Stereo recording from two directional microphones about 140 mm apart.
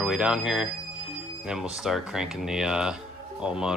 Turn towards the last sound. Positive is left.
turn(degrees=-5)  # may be behind; listen again after turning